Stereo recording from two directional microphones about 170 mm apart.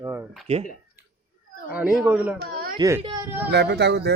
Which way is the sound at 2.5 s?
60° right (ahead or behind).